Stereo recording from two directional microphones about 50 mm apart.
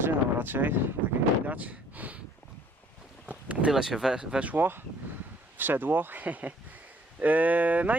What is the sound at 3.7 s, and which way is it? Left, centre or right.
Speech, centre.